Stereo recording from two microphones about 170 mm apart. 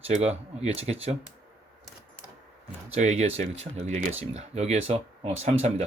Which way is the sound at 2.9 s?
40° right (ahead or behind).